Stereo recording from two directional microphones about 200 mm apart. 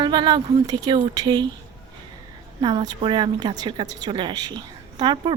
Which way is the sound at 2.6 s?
25° right (ahead or behind).